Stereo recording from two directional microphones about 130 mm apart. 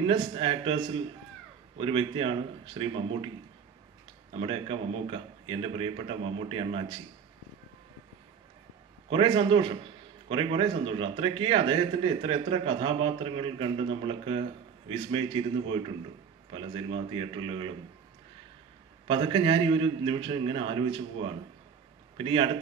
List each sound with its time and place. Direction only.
0.0 s a man's voice: 45° right (ahead or behind)
4.3 s a man's voice: 45° right (ahead or behind)
9.1 s a man's voice: 40° right (ahead or behind)
19.0 s a man's voice: 45° right (ahead or behind)